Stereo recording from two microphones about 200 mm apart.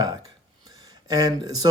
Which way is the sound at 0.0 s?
20° right (ahead or behind).